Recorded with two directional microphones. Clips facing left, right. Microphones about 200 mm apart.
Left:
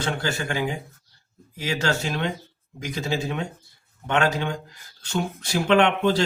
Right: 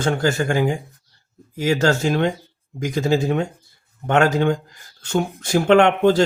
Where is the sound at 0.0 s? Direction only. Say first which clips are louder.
Right 7 dB; 45° right (ahead or behind).